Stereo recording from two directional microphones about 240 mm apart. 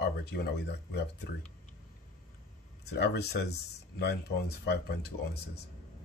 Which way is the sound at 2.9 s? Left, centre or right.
Left.